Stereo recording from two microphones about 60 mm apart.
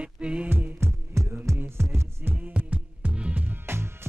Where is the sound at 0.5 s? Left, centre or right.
Right.